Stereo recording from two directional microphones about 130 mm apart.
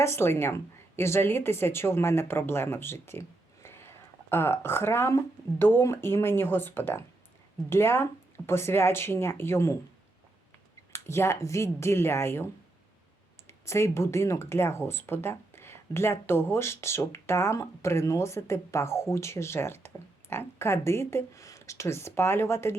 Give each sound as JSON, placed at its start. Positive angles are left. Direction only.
{"t": 0.0, "sound": "a woman's voice", "side_deg": 20}
{"t": 10.9, "sound": "a woman's voice", "side_deg": 20}
{"t": 13.5, "sound": "a woman's voice", "side_deg": 20}